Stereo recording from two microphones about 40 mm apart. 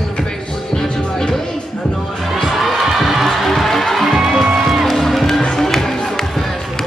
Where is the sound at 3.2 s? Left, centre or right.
Centre.